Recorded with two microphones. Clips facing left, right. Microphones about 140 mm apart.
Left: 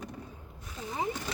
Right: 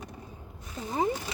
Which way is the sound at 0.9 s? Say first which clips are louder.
Right 6 dB; 40° right (ahead or behind).